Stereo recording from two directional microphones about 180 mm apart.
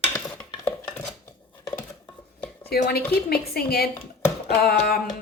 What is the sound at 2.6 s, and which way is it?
Speech, 60° left (ahead or behind).